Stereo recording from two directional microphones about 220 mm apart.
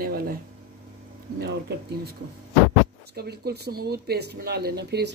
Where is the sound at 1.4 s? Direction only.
45° right (ahead or behind).